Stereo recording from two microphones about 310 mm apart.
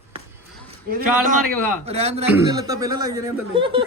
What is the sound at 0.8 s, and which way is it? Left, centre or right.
A man's voice, right.